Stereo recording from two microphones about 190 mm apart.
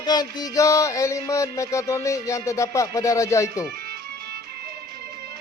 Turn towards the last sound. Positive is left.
turn(degrees=15)  # may be behind; listen again after turning